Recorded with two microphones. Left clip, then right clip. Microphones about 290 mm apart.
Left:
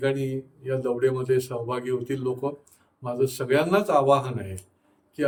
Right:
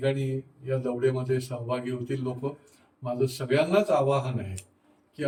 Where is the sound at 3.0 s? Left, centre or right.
Centre.